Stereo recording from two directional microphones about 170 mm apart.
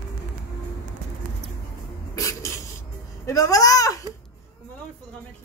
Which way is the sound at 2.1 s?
20° left (ahead or behind).